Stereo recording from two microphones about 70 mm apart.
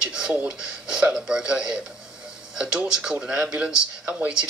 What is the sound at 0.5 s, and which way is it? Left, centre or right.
Speech, centre.